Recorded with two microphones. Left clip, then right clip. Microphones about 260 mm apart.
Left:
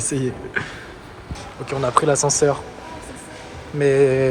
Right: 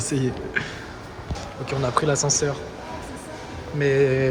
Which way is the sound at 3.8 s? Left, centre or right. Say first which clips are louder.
Left 4 dB; centre.